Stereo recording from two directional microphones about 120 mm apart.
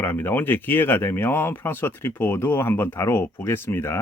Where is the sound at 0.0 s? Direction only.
20° left (ahead or behind).